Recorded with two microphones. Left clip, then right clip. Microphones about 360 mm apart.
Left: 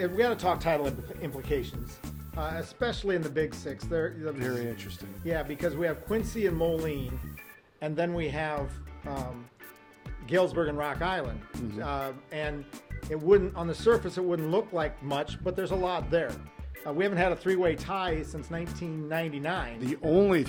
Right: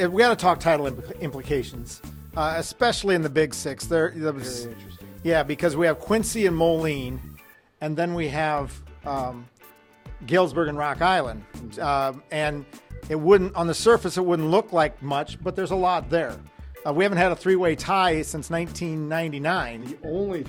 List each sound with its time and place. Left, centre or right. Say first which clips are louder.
0.0 s speech: right 8 dB; right
20.1 s speech: left 4 dB; left